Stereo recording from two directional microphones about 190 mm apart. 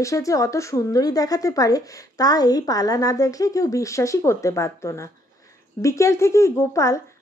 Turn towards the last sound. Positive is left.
turn(degrees=15)  # may be behind; listen again after turning